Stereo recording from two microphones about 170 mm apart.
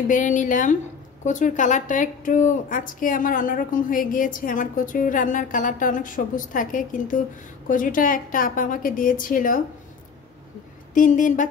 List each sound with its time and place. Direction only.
0.1 s a woman's voice: 50° left (ahead or behind)
11.0 s a woman's voice: 50° left (ahead or behind)